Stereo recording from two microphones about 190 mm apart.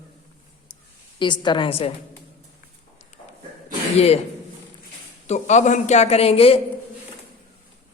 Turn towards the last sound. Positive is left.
turn(degrees=30)  # may be behind; listen again after turning